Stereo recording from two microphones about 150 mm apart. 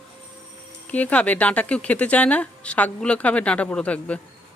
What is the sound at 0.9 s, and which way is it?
Speech, 10° left (ahead or behind).